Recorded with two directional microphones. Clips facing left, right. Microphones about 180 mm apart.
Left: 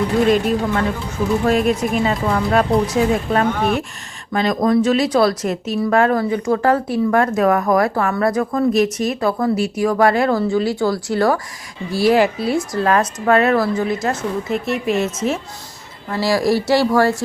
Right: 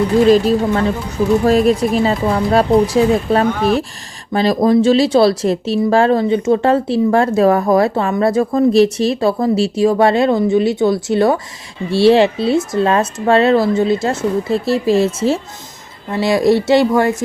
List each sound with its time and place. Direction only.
0.3 s speech: 35° right (ahead or behind); by 17.2 s 20° right (ahead or behind)